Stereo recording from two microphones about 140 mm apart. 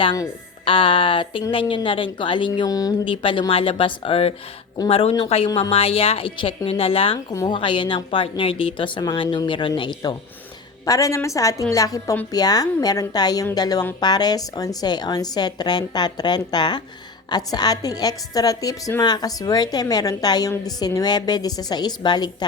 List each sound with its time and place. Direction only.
0.6 s a woman's voice: 40° left (ahead or behind)
2.5 s a woman's voice: 25° left (ahead or behind)
3.1 s a woman's voice: 35° left (ahead or behind)